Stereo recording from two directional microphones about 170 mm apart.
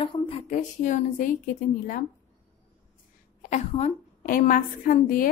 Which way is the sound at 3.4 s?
45° left (ahead or behind).